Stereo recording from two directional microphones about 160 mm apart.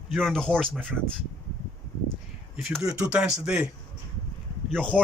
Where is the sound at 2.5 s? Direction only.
Centre (ahead or behind).